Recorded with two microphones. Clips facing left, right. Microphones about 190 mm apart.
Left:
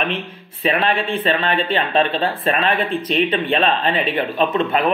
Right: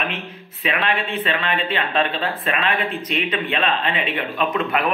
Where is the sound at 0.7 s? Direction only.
35° left (ahead or behind).